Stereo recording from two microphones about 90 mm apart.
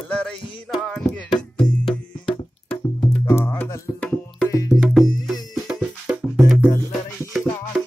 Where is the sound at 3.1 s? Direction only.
25° left (ahead or behind).